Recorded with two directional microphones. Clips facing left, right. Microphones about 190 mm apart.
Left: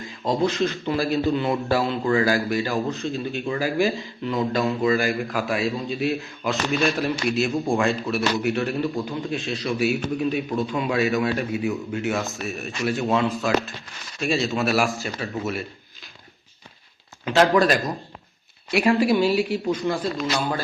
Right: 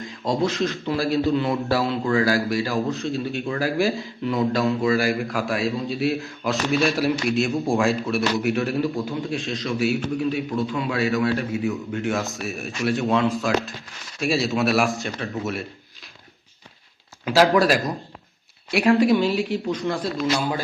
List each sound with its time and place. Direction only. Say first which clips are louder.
0.0 s a man's voice: even; centre (ahead or behind)
9.7 s a man's voice: right 1 dB; 15° left (ahead or behind)
12.0 s a man's voice: right 1 dB; centre (ahead or behind)
17.2 s a man's voice: right 1 dB; 5° right (ahead or behind)